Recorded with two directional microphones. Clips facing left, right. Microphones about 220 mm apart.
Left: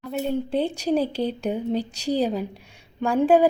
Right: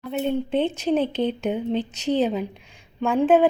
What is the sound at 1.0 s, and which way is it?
A woman's voice, 35° left (ahead or behind).